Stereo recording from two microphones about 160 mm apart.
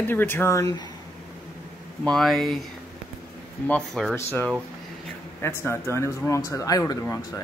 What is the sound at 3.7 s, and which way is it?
A man's voice, 5° left (ahead or behind).